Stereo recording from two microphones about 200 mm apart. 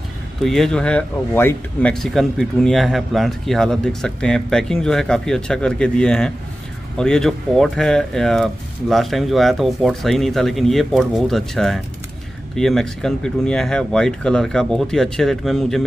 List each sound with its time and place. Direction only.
0.4 s speech: centre (ahead or behind)